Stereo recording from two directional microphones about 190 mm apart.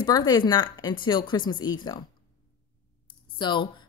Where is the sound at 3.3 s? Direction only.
25° left (ahead or behind).